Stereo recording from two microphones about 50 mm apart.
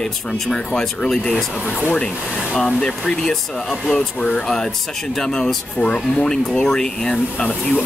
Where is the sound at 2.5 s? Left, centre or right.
Centre.